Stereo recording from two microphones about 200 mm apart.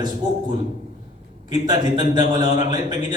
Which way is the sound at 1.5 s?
20° right (ahead or behind).